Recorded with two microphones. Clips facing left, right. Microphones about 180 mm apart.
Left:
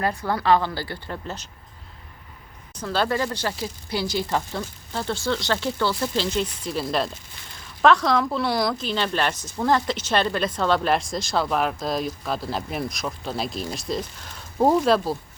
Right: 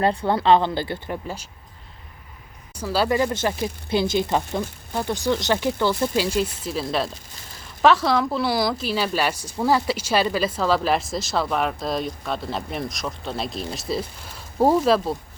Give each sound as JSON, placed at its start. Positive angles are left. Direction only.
{"t": 0.0, "sound": "speech", "side_deg": -30}
{"t": 2.7, "sound": "speech", "side_deg": -5}